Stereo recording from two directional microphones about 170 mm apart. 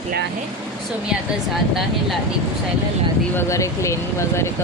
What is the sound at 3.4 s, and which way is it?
A woman's voice, 15° left (ahead or behind).